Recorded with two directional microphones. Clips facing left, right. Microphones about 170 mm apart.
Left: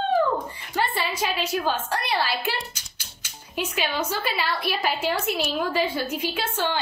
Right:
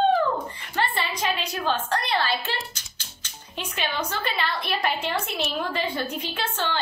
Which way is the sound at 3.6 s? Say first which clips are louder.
Left 3 dB; 10° left (ahead or behind).